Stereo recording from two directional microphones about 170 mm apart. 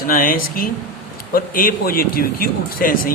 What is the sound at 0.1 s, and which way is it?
Speech, 55° left (ahead or behind).